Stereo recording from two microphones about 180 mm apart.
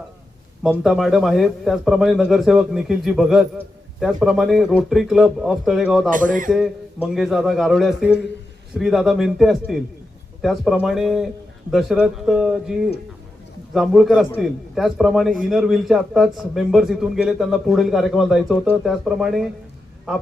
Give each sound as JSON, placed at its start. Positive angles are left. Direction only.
{"t": 0.6, "sound": "a man's voice", "side_deg": 0}
{"t": 6.1, "sound": "speech", "side_deg": -50}
{"t": 6.5, "sound": "a man's voice", "side_deg": 0}